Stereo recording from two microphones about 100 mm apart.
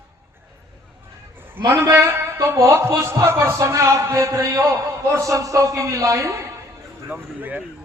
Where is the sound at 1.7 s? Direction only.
30° right (ahead or behind).